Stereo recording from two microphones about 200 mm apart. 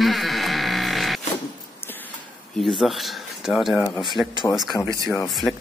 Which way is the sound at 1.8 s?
10° left (ahead or behind).